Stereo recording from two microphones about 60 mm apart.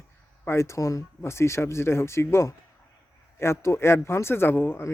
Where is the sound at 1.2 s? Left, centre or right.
Left.